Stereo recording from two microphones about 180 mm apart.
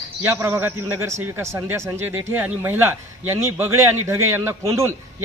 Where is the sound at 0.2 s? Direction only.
15° right (ahead or behind).